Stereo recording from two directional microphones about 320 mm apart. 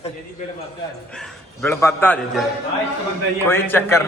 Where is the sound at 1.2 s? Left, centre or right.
Centre.